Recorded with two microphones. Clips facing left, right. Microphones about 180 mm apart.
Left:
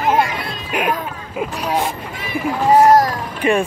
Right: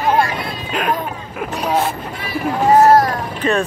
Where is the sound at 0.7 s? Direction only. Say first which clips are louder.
Left 2 dB; 15° left (ahead or behind).